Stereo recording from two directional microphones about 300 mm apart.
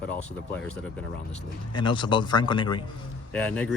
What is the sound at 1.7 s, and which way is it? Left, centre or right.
A man's voice, centre.